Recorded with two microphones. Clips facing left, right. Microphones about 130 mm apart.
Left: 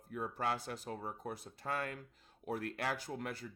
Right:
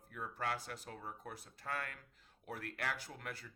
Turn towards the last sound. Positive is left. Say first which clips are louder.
# left 5 dB
turn(degrees=25)  # may be behind; listen again after turning